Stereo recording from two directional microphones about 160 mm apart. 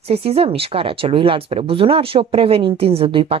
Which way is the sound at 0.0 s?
40° right (ahead or behind).